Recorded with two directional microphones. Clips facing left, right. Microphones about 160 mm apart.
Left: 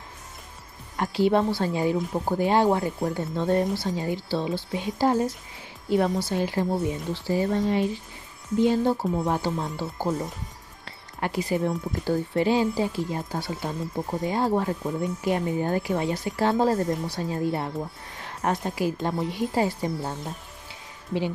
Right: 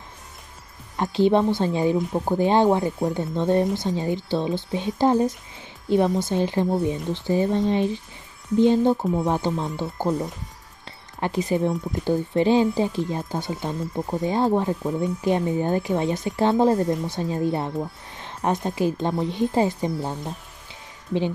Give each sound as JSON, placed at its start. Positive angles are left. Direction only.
{"t": 0.9, "sound": "speech", "side_deg": -20}
{"t": 10.0, "sound": "speech", "side_deg": 0}
{"t": 10.9, "sound": "a sound", "side_deg": -20}
{"t": 12.0, "sound": "speech", "side_deg": -20}
{"t": 18.1, "sound": "a sound", "side_deg": -20}
{"t": 18.8, "sound": "speech", "side_deg": -20}